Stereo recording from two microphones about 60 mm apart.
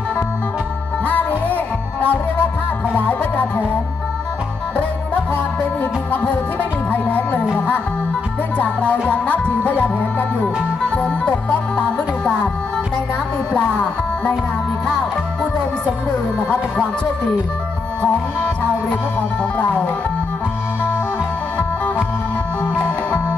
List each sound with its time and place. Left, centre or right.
1.0 s music: left
4.7 s music: left
6.9 s music: left
8.5 s music: left
13.5 s music: centre